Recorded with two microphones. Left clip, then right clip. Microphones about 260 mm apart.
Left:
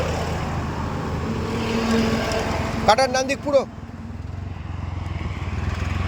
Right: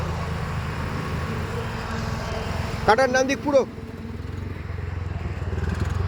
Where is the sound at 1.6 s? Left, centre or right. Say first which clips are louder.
Left 9 dB; left.